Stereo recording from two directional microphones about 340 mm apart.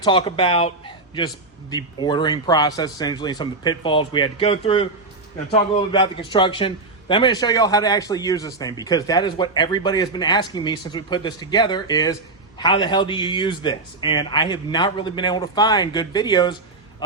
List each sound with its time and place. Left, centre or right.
0.0 s a man's voice: centre